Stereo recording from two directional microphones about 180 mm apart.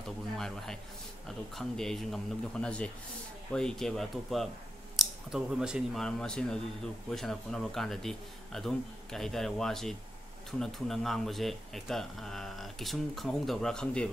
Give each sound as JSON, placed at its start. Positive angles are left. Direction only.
{"t": 1.2, "sound": "speech", "side_deg": 0}